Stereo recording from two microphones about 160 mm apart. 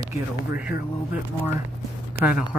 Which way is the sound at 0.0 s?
20° right (ahead or behind).